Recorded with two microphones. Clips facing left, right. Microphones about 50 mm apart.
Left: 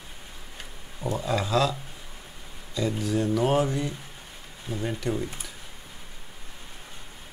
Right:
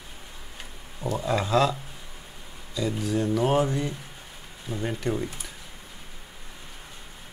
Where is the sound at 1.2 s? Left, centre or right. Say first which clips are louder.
Right 2 dB; centre.